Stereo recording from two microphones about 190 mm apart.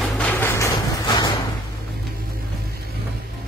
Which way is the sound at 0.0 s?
10° left (ahead or behind).